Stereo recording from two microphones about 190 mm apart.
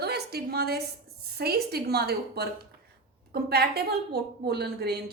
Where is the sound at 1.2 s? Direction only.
55° right (ahead or behind).